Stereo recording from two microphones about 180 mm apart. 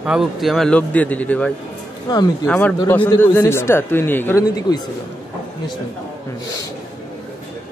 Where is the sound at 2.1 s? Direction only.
25° left (ahead or behind).